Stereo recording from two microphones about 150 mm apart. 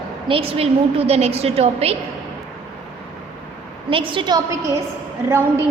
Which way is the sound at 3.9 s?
35° right (ahead or behind).